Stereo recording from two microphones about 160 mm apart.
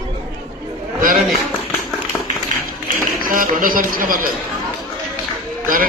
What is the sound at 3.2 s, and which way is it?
Speech, 60° right (ahead or behind).